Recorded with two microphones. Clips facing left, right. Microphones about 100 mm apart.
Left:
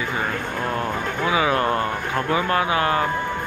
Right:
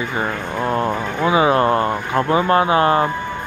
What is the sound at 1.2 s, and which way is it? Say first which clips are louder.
Speech: right 6 dB; 30° right (ahead or behind).